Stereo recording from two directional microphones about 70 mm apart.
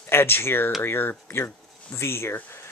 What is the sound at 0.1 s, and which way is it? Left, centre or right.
Speech, left.